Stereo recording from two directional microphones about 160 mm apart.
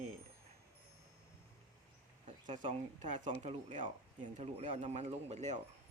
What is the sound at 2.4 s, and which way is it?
Speech, 50° right (ahead or behind).